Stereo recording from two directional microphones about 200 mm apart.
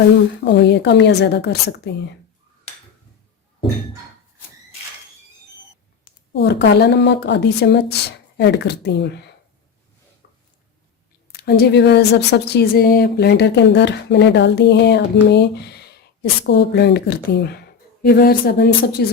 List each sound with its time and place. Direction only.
0.4 s a woman's voice: 60° left (ahead or behind)
6.3 s a woman's voice: 55° left (ahead or behind)
10.2 s a sound: 55° left (ahead or behind)
11.3 s a woman's voice: 50° left (ahead or behind)